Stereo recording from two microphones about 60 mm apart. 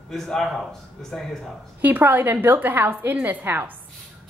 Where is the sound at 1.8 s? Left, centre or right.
Right.